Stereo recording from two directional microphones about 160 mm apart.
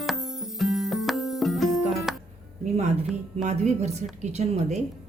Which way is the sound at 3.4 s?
45° right (ahead or behind).